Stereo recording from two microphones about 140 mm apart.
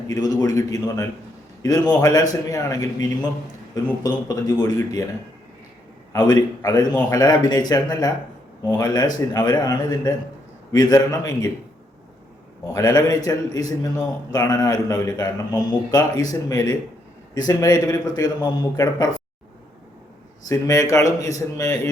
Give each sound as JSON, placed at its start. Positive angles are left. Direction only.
{"t": 0.1, "sound": "a man's voice", "side_deg": 25}
{"t": 6.1, "sound": "a man's voice", "side_deg": 25}
{"t": 12.6, "sound": "a man's voice", "side_deg": 25}
{"t": 20.5, "sound": "a man's voice", "side_deg": 25}